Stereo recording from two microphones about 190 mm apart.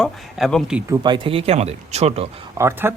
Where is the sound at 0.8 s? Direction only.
20° right (ahead or behind).